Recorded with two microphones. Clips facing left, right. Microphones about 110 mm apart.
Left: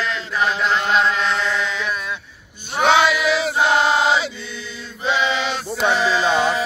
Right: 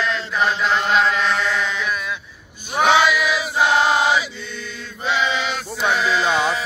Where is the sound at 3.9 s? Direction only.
25° left (ahead or behind).